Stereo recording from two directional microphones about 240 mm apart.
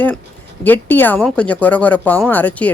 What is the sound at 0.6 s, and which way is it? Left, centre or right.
Speech, centre.